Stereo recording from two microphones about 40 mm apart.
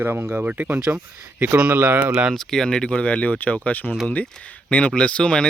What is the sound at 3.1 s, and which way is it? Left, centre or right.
Speech, left.